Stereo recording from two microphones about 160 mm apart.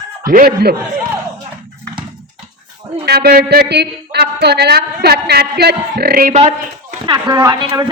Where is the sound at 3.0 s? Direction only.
80° right.